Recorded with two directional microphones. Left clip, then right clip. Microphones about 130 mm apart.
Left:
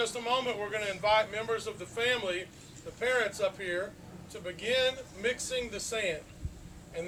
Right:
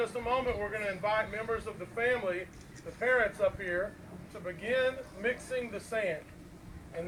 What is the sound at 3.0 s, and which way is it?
Speech, 50° left (ahead or behind).